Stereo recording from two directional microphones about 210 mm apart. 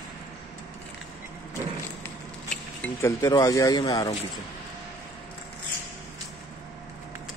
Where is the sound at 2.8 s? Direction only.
15° left (ahead or behind).